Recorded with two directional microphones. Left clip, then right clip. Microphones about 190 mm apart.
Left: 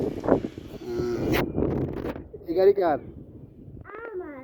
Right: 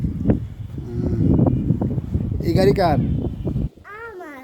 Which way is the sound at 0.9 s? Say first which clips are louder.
Even; 5° left (ahead or behind).